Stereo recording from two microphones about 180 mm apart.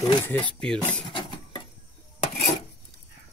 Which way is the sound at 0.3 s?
10° left (ahead or behind).